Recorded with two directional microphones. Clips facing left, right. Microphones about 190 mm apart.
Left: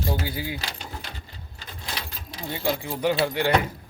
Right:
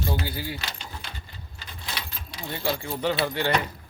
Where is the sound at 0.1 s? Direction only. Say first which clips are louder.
Left 1 dB; 15° left (ahead or behind).